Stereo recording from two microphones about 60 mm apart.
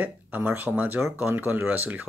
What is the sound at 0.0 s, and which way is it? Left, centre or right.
Speech, right.